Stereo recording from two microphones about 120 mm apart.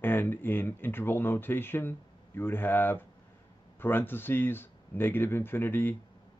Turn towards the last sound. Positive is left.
turn(degrees=15)  # may be behind; listen again after turning